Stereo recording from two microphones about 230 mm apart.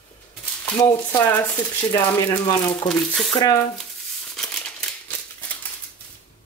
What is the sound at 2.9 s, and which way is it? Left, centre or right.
Speech, centre.